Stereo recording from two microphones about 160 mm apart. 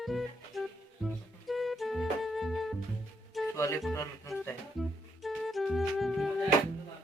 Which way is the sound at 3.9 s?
20° left (ahead or behind).